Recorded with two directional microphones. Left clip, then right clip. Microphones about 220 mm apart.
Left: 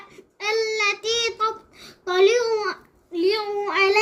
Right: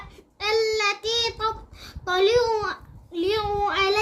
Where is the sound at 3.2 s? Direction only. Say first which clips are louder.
Left 1 dB; 10° right (ahead or behind).